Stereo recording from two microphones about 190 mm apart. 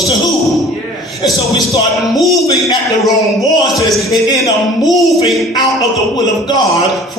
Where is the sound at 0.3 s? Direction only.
Centre (ahead or behind).